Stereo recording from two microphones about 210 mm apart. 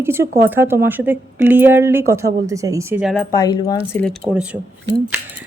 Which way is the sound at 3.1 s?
15° left (ahead or behind).